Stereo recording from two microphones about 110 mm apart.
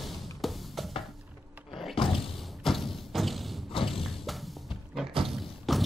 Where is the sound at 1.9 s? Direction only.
55° left (ahead or behind).